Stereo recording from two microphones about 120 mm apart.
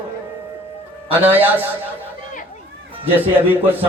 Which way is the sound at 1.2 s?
15° right (ahead or behind).